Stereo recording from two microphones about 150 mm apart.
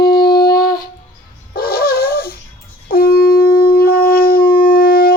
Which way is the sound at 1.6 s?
90° left.